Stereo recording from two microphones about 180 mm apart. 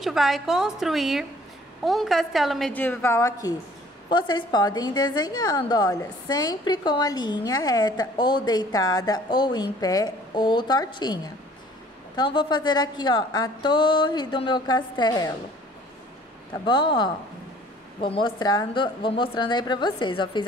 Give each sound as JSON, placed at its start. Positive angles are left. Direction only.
{"t": 0.0, "sound": "a woman's voice", "side_deg": 0}
{"t": 16.6, "sound": "a woman's voice", "side_deg": 25}